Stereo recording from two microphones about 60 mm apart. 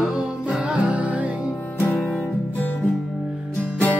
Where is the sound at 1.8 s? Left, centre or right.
Left.